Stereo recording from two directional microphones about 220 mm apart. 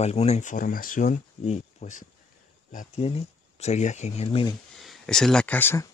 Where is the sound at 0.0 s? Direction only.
30° left (ahead or behind).